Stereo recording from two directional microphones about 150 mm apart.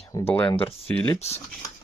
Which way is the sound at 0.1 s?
15° left (ahead or behind).